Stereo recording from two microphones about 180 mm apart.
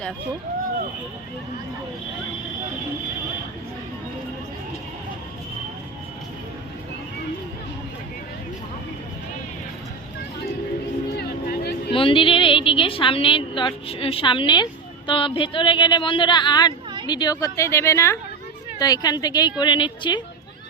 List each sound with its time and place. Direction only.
11.2 s music: 60° left (ahead or behind)
11.9 s a woman's voice: 30° left (ahead or behind)